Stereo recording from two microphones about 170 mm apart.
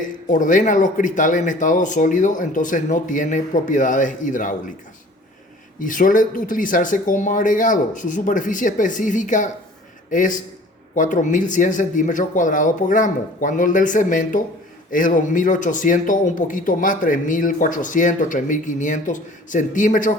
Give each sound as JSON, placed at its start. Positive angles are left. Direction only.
{"t": 0.3, "sound": "speech", "side_deg": 50}
{"t": 5.8, "sound": "speech", "side_deg": 50}